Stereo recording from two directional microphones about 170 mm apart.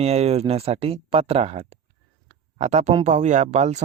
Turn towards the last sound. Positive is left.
turn(degrees=-40)  # may be behind; listen again after turning